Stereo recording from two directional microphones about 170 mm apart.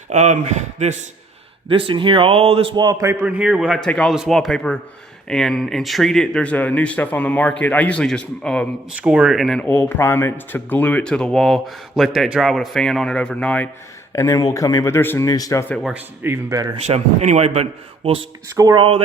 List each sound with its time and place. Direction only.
0.1 s speech: 45° right (ahead or behind)
1.6 s a man's voice: 30° right (ahead or behind); by 8.6 s 5° left (ahead or behind)
9.0 s speech: 5° right (ahead or behind)
14.1 s speech: 20° left (ahead or behind)
15.7 s a man's voice: 5° right (ahead or behind); by 16.7 s 20° right (ahead or behind)
16.8 s a man's voice: 40° right (ahead or behind)